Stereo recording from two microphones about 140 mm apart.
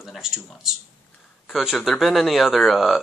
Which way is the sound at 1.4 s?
Centre (ahead or behind).